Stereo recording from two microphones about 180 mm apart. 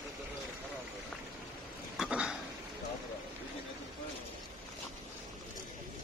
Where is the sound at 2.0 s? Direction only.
5° right (ahead or behind).